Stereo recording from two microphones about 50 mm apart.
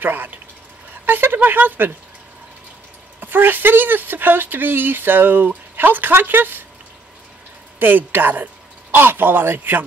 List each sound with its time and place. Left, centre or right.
0.0 s speech: right
3.2 s speech: right
7.8 s speech: right